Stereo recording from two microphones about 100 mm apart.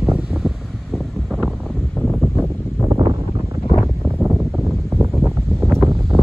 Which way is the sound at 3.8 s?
Centre (ahead or behind).